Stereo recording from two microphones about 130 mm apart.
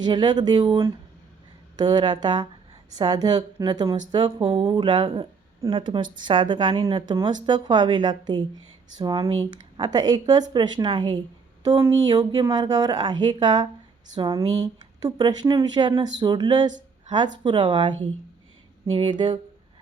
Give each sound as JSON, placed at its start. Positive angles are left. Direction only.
{"t": 0.0, "sound": "a woman's voice", "side_deg": -35}
{"t": 4.7, "sound": "a woman's voice", "side_deg": -35}